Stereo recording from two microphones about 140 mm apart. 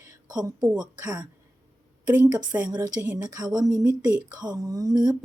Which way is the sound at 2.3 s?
10° right (ahead or behind).